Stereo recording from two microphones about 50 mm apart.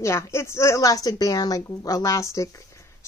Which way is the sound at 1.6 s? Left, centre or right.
Left.